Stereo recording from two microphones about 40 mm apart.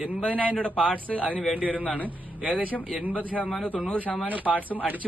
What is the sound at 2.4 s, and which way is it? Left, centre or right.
Speech, right.